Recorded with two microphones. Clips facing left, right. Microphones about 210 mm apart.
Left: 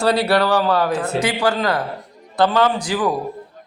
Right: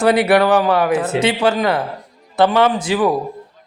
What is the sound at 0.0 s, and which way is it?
A man's voice, 20° right (ahead or behind).